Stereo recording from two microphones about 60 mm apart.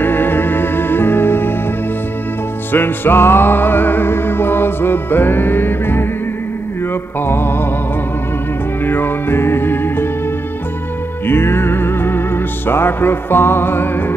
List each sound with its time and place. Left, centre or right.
0.0 s music: left
2.7 s music: left
7.2 s music: left
8.8 s music: left
11.2 s music: left